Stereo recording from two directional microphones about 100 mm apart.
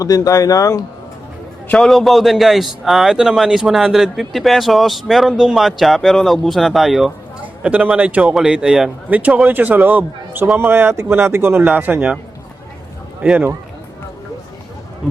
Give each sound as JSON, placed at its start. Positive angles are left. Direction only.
{"t": 0.0, "sound": "speech", "side_deg": 35}
{"t": 1.7, "sound": "a man's voice", "side_deg": 5}
{"t": 7.4, "sound": "speech", "side_deg": -15}
{"t": 13.2, "sound": "speech", "side_deg": -10}